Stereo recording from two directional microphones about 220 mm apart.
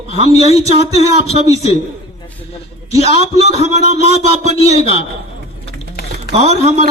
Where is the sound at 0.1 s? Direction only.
30° right (ahead or behind).